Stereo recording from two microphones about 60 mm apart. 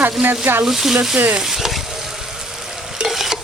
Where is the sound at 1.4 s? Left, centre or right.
Centre.